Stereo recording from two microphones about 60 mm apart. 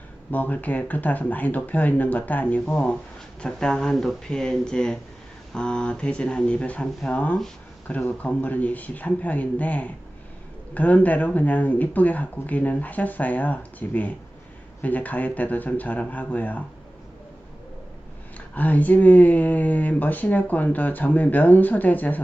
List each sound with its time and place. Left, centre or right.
0.3 s speech: left
18.3 s speech: left